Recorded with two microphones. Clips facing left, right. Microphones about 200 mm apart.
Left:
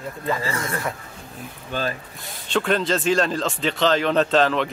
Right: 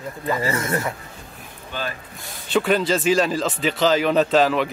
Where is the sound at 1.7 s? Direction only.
45° left (ahead or behind).